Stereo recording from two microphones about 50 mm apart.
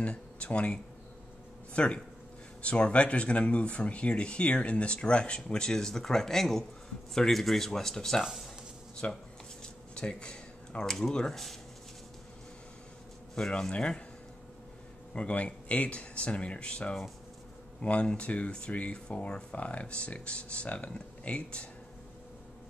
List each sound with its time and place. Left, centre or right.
0.0 s speech: left
8.2 s speech: centre
9.0 s speech: left
9.9 s speech: centre
13.3 s speech: centre
15.1 s speech: left